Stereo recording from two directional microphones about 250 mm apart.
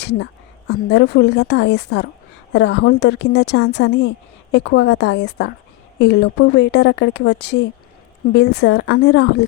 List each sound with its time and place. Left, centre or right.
0.0 s a woman's voice: left